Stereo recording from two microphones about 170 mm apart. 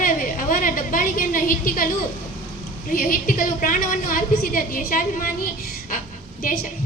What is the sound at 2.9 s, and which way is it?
A woman's voice, 55° left (ahead or behind).